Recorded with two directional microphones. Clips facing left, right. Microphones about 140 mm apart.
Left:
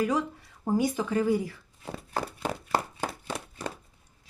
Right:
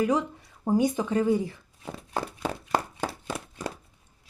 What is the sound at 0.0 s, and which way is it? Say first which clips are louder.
Speech: right 2 dB; 20° right (ahead or behind).